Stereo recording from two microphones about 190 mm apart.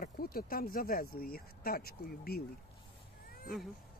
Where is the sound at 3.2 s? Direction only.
50° left (ahead or behind).